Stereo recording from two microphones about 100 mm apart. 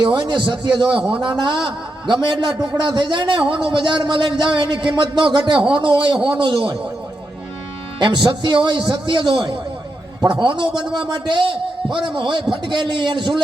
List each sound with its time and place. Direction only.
0.0 s a man's voice: 50° right (ahead or behind)
7.9 s a man's voice: 50° right (ahead or behind)